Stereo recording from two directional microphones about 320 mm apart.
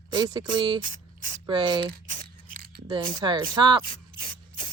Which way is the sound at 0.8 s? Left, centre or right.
Right.